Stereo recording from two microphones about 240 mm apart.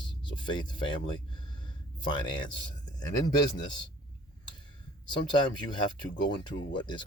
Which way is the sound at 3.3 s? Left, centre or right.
Centre.